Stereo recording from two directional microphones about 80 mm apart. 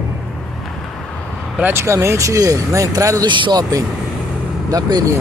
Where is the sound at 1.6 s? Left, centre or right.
Right.